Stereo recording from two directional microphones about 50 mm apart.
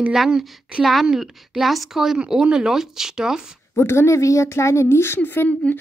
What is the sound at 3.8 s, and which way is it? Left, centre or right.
A woman's voice, left.